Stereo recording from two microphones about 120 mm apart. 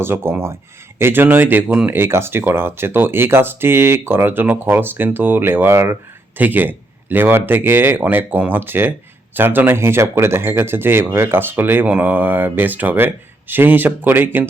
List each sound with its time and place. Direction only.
0.0 s speech: 20° right (ahead or behind)